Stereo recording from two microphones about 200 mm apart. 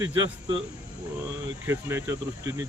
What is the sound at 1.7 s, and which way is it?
Speech, 15° right (ahead or behind).